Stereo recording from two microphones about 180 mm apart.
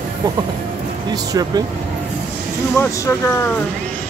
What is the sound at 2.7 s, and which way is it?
Speech, 15° left (ahead or behind).